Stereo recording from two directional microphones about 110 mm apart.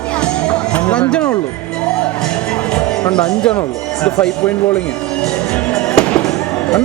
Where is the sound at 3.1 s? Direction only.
5° left (ahead or behind).